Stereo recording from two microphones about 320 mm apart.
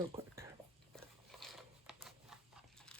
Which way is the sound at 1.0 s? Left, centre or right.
Centre.